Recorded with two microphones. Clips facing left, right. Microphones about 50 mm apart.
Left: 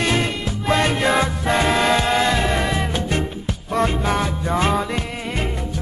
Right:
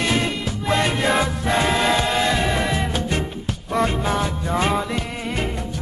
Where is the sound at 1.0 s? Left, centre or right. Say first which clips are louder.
Left 1 dB; centre.